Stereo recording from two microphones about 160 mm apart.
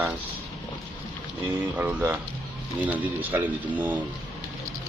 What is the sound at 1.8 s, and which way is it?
Speech, 10° right (ahead or behind).